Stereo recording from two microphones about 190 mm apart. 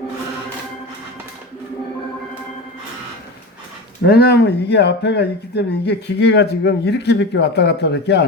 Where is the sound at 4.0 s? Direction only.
60° left (ahead or behind).